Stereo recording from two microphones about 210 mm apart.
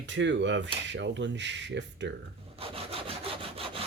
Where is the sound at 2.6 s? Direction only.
25° right (ahead or behind).